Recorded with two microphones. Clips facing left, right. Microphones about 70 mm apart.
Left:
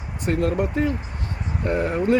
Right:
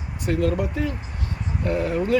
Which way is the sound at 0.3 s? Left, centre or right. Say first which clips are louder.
Left 1 dB; left.